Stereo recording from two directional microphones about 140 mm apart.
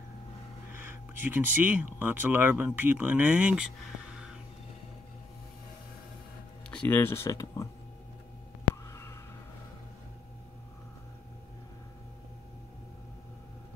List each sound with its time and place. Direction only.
0.7 s speech: 15° right (ahead or behind)
6.7 s speech: 10° left (ahead or behind)
8.9 s a sound: 20° left (ahead or behind)